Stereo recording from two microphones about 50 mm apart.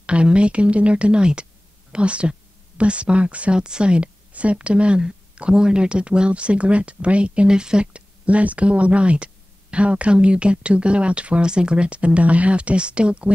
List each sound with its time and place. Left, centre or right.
0.0 s a woman's voice: right